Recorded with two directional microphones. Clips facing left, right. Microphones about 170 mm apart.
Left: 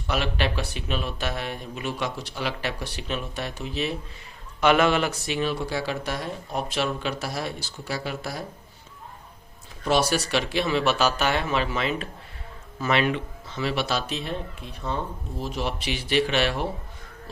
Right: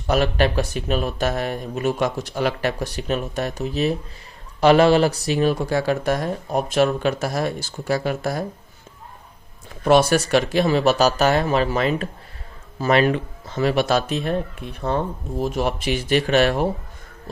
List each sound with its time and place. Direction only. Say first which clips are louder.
0.1 s speech: right 7 dB; 45° right (ahead or behind)
9.8 s speech: right 7 dB; 55° right (ahead or behind)